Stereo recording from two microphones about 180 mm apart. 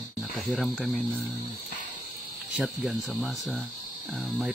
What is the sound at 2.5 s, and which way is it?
Speech, centre (ahead or behind).